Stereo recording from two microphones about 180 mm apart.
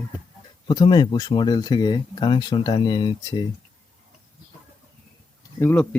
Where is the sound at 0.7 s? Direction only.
25° left (ahead or behind).